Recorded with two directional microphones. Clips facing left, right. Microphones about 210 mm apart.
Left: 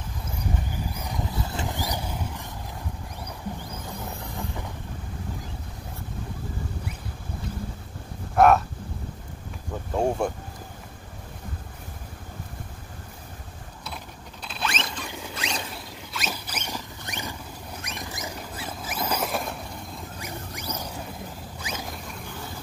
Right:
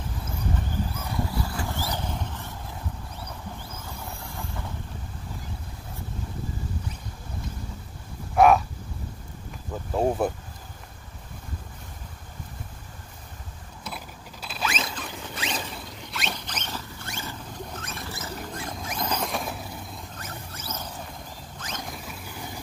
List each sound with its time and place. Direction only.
0.9 s vehicle: 15° left (ahead or behind)
8.4 s speech: centre (ahead or behind)
9.9 s speech: 5° right (ahead or behind)
13.9 s rodents: 5° right (ahead or behind)
20.2 s rodents: 15° left (ahead or behind)